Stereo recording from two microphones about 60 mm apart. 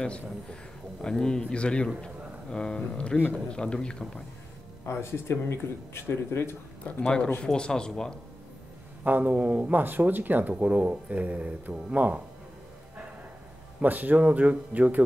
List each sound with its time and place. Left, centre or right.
0.0 s speech: centre
4.9 s speech: left
7.4 s speech: centre
9.0 s speech: right
13.7 s speech: right